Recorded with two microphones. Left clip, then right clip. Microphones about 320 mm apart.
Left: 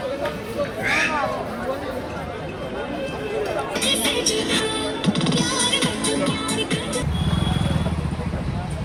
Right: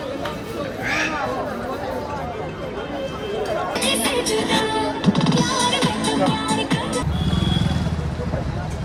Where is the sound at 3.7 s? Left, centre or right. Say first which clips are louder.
Even; right.